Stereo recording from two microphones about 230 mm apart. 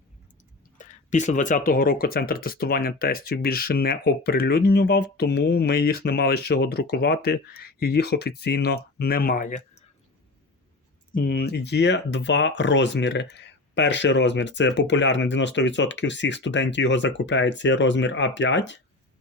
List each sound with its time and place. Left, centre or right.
0.8 s speech: left
11.1 s speech: left